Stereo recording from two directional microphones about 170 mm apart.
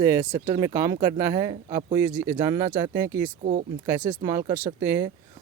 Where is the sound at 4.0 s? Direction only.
25° right (ahead or behind).